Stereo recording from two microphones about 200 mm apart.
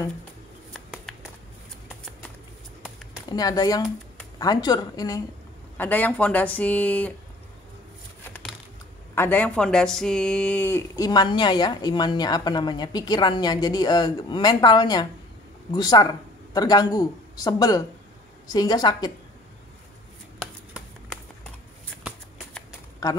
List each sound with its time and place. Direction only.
0.7 s bird: centre (ahead or behind)
3.3 s speech: 20° left (ahead or behind)
8.3 s computer keyboard: 5° left (ahead or behind)
9.1 s speech: 10° left (ahead or behind)